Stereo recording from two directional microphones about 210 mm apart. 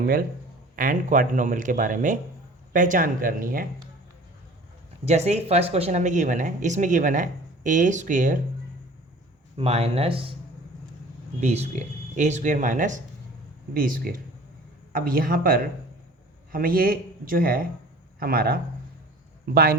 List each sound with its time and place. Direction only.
0.8 s speech: 40° right (ahead or behind)
5.0 s speech: 30° right (ahead or behind)
9.6 s speech: 30° right (ahead or behind)
11.3 s a man's voice: 30° right (ahead or behind)